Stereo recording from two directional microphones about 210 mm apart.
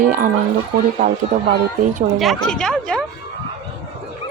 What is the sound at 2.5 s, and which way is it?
Speech, 5° left (ahead or behind).